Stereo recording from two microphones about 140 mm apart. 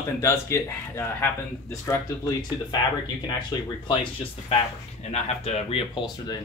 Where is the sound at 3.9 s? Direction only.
40° left (ahead or behind).